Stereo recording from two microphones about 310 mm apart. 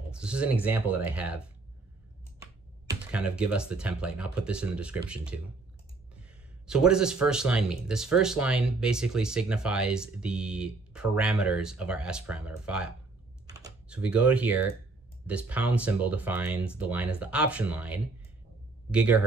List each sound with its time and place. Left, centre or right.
0.1 s speech: centre
2.9 s speech: centre
6.7 s speech: centre